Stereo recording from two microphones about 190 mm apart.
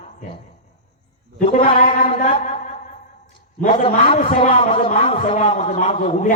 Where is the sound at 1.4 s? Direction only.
40° left (ahead or behind).